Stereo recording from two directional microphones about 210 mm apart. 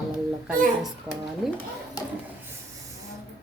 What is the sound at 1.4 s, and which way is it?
Speech, centre (ahead or behind).